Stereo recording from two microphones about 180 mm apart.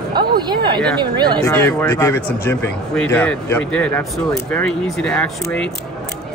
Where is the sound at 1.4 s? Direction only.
15° left (ahead or behind).